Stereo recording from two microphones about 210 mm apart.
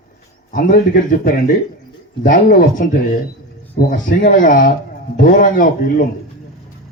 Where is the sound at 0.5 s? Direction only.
40° left (ahead or behind).